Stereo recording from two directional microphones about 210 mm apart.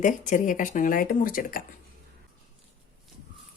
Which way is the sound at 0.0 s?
35° left (ahead or behind).